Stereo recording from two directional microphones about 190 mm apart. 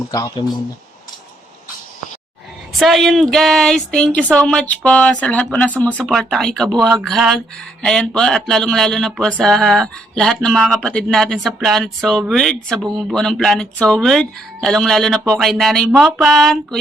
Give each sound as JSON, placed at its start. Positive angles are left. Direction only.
{"t": 0.1, "sound": "speech", "side_deg": 20}
{"t": 2.7, "sound": "speech", "side_deg": 0}